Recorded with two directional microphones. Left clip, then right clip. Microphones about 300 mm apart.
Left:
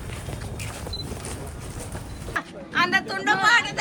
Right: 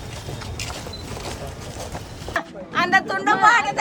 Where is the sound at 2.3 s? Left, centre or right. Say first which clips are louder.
Right 1 dB; right.